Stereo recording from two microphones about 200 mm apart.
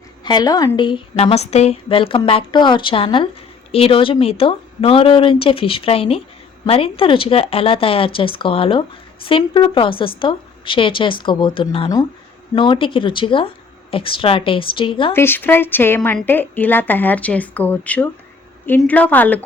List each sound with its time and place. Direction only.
0.3 s a woman's voice: 20° left (ahead or behind)
15.1 s a woman's voice: 10° left (ahead or behind)